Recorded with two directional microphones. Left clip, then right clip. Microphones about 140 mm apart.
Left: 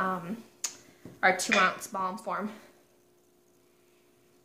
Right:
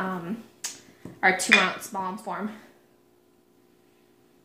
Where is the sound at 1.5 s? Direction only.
65° right (ahead or behind).